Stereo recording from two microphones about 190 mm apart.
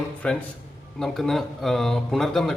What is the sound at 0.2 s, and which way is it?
Speech, 5° left (ahead or behind).